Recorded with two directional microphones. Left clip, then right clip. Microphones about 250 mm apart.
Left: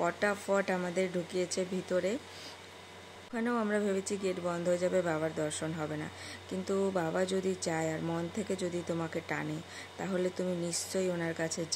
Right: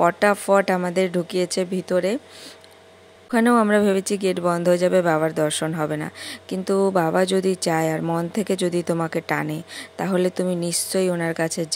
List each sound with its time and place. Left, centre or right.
0.0 s speech: right
3.3 s speech: right